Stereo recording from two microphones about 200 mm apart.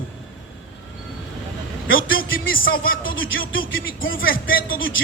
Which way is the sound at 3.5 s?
80° left.